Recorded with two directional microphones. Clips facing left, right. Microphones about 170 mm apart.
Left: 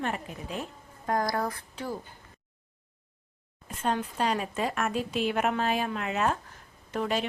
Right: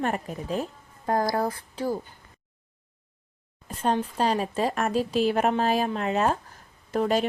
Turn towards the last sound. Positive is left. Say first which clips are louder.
# right 5 dB
turn(degrees=-40)  # may be behind; listen again after turning